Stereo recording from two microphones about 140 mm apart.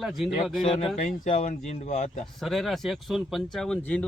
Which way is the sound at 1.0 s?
65° left (ahead or behind).